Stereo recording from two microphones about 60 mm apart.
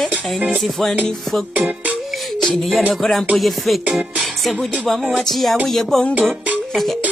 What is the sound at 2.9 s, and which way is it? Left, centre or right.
Music, centre.